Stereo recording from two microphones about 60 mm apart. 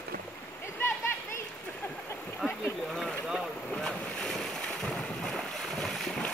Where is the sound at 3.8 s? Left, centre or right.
Centre.